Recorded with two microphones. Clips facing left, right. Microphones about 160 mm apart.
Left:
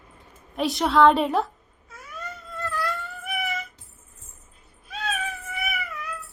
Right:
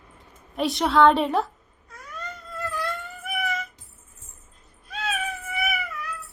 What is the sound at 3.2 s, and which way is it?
Music, centre (ahead or behind).